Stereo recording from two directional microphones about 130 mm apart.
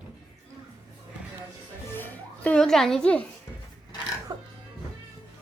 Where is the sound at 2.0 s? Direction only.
15° left (ahead or behind).